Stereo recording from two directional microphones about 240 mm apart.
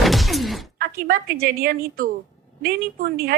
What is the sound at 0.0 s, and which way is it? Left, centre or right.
Shatter, centre.